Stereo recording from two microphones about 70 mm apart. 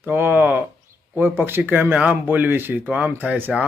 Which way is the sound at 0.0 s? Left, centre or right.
Right.